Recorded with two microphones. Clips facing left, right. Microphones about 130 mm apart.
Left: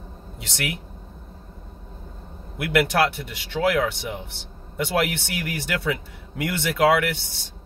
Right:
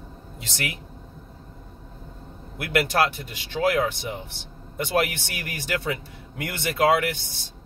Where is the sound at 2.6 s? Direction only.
65° left (ahead or behind).